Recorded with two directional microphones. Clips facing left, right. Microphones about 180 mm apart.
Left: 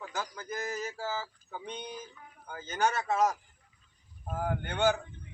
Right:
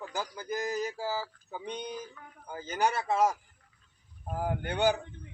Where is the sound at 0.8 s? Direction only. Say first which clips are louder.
Right 2 dB; 15° right (ahead or behind).